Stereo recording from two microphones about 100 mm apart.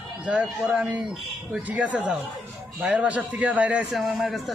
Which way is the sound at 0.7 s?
Centre (ahead or behind).